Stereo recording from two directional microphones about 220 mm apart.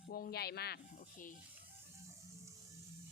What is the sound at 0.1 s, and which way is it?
Speech, 45° left (ahead or behind).